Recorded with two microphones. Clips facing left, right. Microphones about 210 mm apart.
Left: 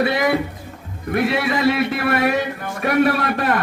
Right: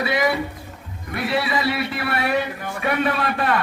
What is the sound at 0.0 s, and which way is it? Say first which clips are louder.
A man's voice: left 3 dB; 55° left (ahead or behind).